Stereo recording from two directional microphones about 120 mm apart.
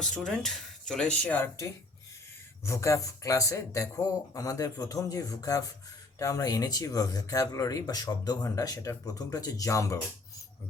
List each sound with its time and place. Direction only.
0.0 s speech: 5° left (ahead or behind)
2.6 s speech: 25° left (ahead or behind)